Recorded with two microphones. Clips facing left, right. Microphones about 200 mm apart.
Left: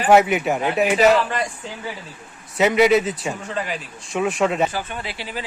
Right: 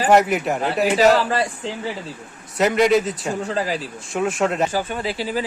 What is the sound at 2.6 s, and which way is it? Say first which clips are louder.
Speech: left 1 dB; 5° left (ahead or behind).